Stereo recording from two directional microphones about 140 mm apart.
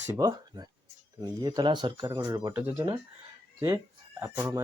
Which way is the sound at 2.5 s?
15° right (ahead or behind).